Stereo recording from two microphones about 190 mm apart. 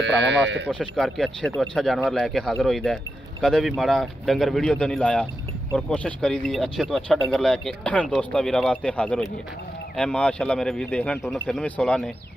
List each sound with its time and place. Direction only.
0.0 s speech: 70° right (ahead or behind)
0.7 s speech: 5° left (ahead or behind)